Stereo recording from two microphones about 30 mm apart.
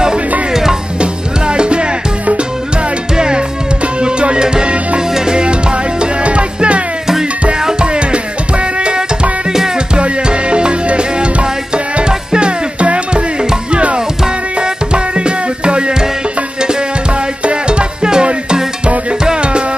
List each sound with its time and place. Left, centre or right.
0.5 s music: centre
1.0 s music: right
3.2 s music: right
7.8 s music: right
17.5 s music: right